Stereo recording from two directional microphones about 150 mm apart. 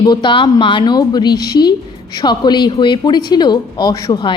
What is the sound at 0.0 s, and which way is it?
A woman's voice, 30° left (ahead or behind).